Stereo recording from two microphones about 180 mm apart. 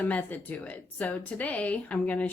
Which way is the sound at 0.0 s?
10° left (ahead or behind).